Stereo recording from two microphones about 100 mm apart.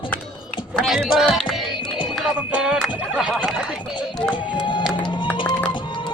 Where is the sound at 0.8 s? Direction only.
Centre (ahead or behind).